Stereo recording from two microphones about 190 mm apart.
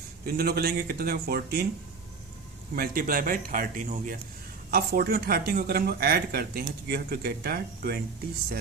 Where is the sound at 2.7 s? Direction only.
50° right (ahead or behind).